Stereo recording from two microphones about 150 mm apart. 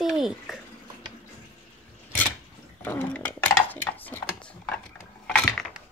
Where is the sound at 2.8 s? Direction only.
15° left (ahead or behind).